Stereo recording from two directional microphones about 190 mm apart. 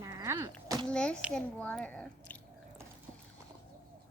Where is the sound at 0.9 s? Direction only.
5° left (ahead or behind).